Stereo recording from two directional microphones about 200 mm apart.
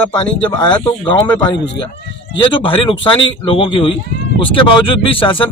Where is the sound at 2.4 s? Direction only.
25° left (ahead or behind).